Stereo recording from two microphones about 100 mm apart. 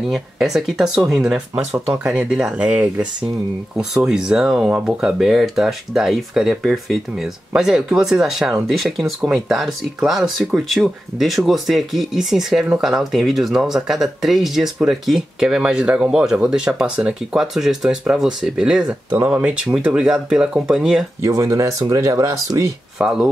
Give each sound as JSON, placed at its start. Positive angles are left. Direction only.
{"t": 0.1, "sound": "speech", "side_deg": 0}
{"t": 19.0, "sound": "speech", "side_deg": -20}
{"t": 21.2, "sound": "speech", "side_deg": -30}
{"t": 22.9, "sound": "speech", "side_deg": -10}